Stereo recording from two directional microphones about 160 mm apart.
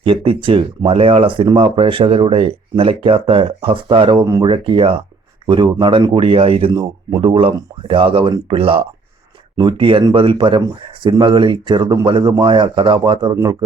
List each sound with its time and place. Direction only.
0.0 s speech: 35° right (ahead or behind)